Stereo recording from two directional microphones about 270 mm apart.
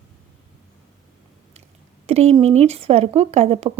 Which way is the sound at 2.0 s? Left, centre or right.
Right.